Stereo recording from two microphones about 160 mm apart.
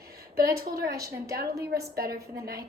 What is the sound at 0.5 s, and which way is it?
Speech, 75° right (ahead or behind).